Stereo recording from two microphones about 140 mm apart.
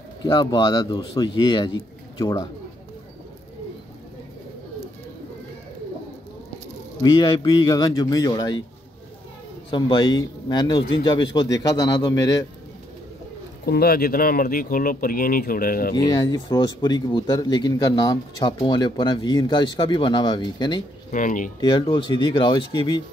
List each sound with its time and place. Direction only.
0.2 s a man's voice: 30° left (ahead or behind)
7.0 s a man's voice: 30° left (ahead or behind)
9.7 s speech: 35° left (ahead or behind)
13.7 s speech: 90° left
16.3 s a man's voice: 30° left (ahead or behind)
21.1 s speech: 70° left (ahead or behind)
21.5 s speech: 35° left (ahead or behind)